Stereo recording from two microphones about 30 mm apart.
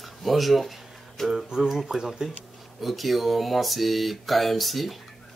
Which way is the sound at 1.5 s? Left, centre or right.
Centre.